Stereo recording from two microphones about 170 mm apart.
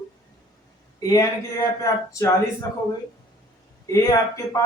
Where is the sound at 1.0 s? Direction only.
20° left (ahead or behind).